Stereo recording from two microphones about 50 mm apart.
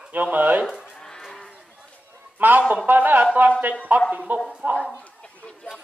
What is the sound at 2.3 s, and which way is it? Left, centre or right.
A man's voice, right.